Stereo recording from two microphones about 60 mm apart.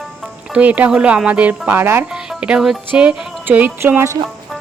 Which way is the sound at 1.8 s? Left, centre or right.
Right.